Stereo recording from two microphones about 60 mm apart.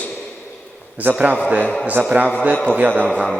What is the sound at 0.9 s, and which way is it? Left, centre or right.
A man's voice, right.